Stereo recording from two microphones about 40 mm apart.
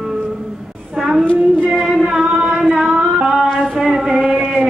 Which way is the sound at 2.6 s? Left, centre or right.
Centre.